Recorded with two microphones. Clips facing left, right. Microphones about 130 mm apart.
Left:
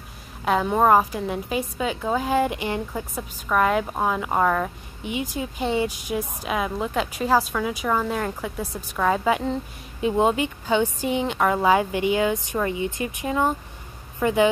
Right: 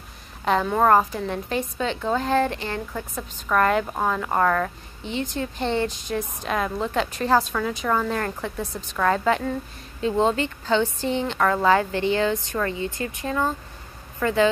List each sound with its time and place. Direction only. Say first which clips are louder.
0.7 s a woman's voice: left 1 dB; 10° left (ahead or behind)